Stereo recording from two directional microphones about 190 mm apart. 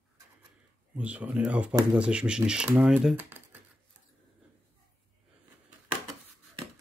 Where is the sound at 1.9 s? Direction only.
5° right (ahead or behind).